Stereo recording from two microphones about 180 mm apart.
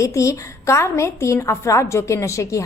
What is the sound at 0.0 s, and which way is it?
A woman's voice, 15° left (ahead or behind).